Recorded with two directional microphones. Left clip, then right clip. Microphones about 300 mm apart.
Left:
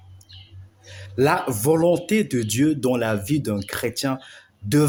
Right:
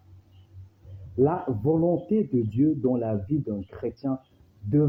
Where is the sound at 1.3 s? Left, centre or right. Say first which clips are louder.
Left 6 dB; left.